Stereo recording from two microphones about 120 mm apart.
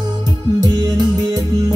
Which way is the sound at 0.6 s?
30° right (ahead or behind).